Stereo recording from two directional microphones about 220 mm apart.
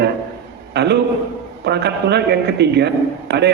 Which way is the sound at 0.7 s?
50° right (ahead or behind).